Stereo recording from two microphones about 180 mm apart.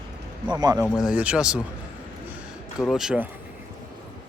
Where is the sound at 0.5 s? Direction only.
20° right (ahead or behind).